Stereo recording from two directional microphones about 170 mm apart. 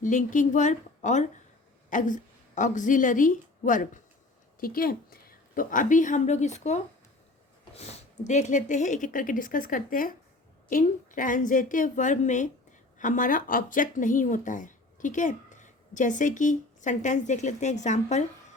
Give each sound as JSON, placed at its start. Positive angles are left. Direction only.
{"t": 0.0, "sound": "a woman's voice", "side_deg": 50}